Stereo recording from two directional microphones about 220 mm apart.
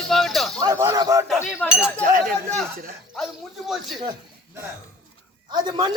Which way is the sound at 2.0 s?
40° right (ahead or behind).